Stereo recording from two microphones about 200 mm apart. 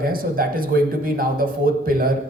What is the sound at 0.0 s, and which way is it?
A man's voice, 45° right (ahead or behind).